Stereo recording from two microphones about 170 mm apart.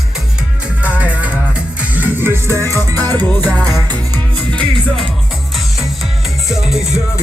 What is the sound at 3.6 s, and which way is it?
Music, 20° right (ahead or behind).